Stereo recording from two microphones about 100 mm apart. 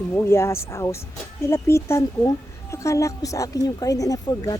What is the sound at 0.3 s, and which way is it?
A woman's voice, 25° left (ahead or behind).